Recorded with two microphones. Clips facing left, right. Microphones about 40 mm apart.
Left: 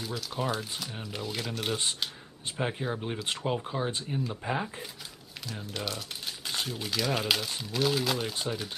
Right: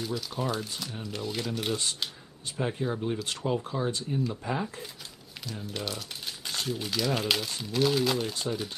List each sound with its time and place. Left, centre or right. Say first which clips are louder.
0.0 s speech: right 1 dB; centre
2.5 s speech: right 1 dB; centre
5.4 s crumpling: even; centre
6.7 s speech: right 2 dB; centre